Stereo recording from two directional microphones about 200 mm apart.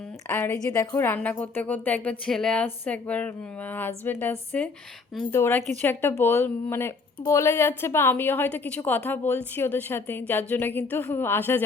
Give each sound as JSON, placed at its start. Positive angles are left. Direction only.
{"t": 0.3, "sound": "a woman's voice", "side_deg": 10}